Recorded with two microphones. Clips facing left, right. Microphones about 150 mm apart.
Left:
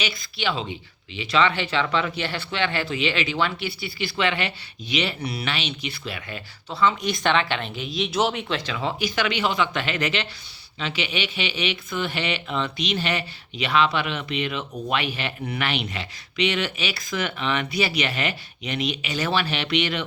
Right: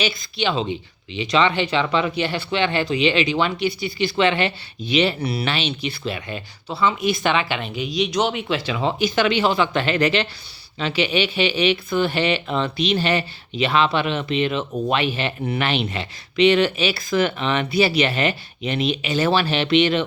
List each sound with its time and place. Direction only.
0.0 s speech: 25° right (ahead or behind)
6.7 s a woman's voice: 10° right (ahead or behind)
8.7 s speech: 25° right (ahead or behind)